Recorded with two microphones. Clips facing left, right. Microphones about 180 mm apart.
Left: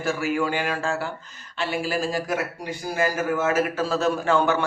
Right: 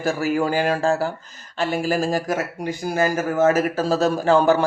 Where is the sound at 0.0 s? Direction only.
40° right (ahead or behind).